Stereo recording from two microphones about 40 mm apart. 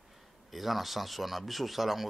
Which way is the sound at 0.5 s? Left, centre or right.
Centre.